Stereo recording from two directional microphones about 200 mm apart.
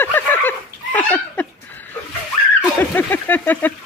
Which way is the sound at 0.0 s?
10° left (ahead or behind).